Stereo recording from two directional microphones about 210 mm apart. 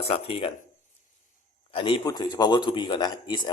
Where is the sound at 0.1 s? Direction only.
25° left (ahead or behind).